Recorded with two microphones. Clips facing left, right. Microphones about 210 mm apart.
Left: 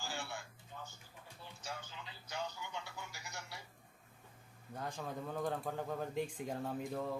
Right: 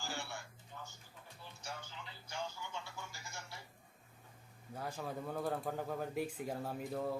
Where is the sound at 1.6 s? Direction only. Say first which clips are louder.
Left 1 dB; 20° left (ahead or behind).